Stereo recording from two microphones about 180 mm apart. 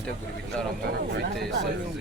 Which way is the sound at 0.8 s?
75° right (ahead or behind).